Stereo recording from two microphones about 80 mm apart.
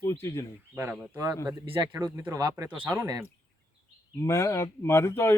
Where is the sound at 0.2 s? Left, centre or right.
Left.